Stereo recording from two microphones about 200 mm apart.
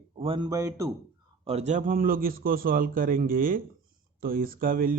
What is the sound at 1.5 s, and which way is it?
A man's voice, 35° right (ahead or behind).